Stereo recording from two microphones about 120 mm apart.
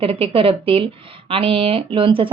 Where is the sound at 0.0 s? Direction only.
50° right (ahead or behind).